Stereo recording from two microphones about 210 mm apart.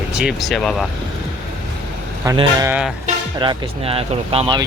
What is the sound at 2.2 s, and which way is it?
Speech, 20° right (ahead or behind).